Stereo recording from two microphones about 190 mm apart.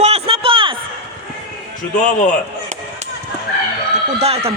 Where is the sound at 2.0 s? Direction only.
40° left (ahead or behind).